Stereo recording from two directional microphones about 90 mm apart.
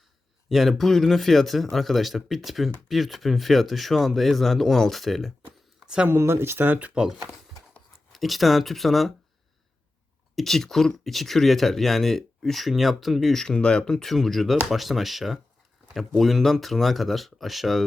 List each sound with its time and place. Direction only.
0.4 s speech: centre (ahead or behind)
5.8 s a sound: 10° right (ahead or behind)
6.1 s speech: 30° right (ahead or behind); by 9.1 s centre (ahead or behind)
10.3 s speech: 5° left (ahead or behind)